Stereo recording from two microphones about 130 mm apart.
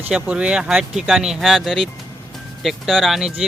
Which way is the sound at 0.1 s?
10° right (ahead or behind).